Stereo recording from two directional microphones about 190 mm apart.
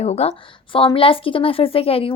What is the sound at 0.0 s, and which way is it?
A woman's voice, 35° left (ahead or behind).